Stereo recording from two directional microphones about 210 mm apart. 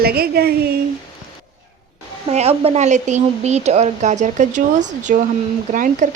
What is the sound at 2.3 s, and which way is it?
Speech, 30° right (ahead or behind).